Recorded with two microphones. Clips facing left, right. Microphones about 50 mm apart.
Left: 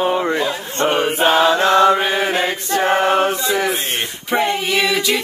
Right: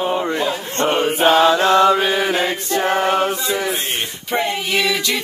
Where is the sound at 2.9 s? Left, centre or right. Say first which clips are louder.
Left 2 dB; left.